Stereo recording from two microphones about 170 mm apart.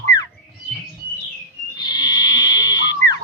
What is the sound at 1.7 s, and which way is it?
Frog, 25° left (ahead or behind).